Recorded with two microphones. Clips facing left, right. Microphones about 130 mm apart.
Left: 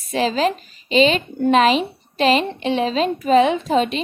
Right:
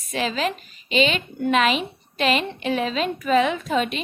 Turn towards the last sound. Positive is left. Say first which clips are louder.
# left 5 dB
turn(degrees=30)  # may be behind; listen again after turning